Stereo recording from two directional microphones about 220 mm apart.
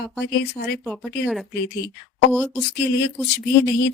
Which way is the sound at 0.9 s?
Centre (ahead or behind).